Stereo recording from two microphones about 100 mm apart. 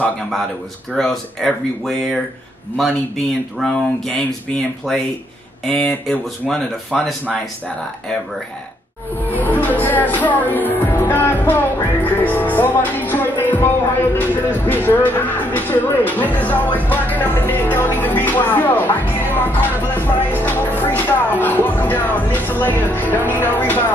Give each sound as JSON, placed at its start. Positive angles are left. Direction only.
{"t": 0.9, "sound": "speech", "side_deg": 5}
{"t": 3.5, "sound": "speech", "side_deg": 5}
{"t": 6.0, "sound": "speech", "side_deg": 5}
{"t": 9.2, "sound": "speech", "side_deg": 15}